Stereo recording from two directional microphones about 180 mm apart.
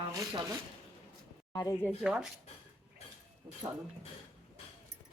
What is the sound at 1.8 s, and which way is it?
Speech, centre (ahead or behind).